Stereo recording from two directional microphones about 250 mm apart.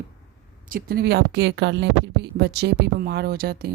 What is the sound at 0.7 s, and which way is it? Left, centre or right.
Speech, right.